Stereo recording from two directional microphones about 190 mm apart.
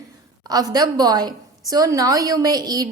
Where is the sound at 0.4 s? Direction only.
20° right (ahead or behind).